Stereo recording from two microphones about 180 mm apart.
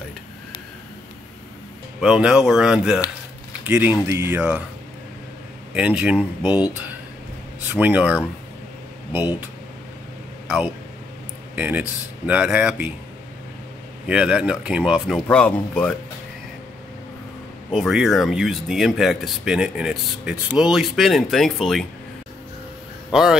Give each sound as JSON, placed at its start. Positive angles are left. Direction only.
{"t": 2.0, "sound": "speech", "side_deg": -5}
{"t": 5.8, "sound": "speech", "side_deg": -5}
{"t": 6.4, "sound": "speech", "side_deg": 25}
{"t": 7.7, "sound": "speech", "side_deg": -10}
{"t": 11.5, "sound": "speech", "side_deg": -10}
{"t": 14.0, "sound": "speech", "side_deg": -5}
{"t": 15.2, "sound": "speech", "side_deg": 5}
{"t": 17.6, "sound": "speech", "side_deg": 0}